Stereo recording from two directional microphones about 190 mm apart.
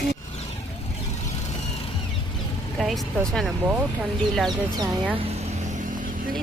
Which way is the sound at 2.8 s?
Centre (ahead or behind).